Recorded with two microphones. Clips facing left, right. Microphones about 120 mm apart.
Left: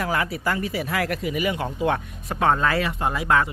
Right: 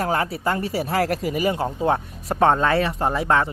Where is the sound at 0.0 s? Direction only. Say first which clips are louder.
Right 2 dB; 30° right (ahead or behind).